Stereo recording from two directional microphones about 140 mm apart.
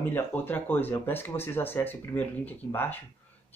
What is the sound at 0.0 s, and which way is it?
Speech, 15° left (ahead or behind).